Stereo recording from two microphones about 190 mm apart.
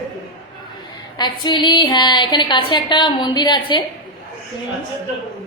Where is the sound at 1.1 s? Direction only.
20° left (ahead or behind).